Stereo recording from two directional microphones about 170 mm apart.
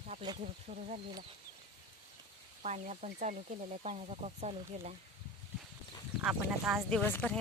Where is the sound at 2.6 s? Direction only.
45° right (ahead or behind).